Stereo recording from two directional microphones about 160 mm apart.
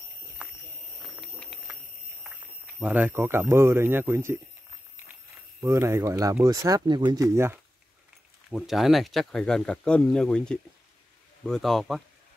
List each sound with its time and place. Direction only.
0.4 s a sound: 5° right (ahead or behind)
2.8 s speech: 10° right (ahead or behind)
5.6 s speech: 20° right (ahead or behind)
7.3 s speech: 15° right (ahead or behind)
8.5 s speech: centre (ahead or behind)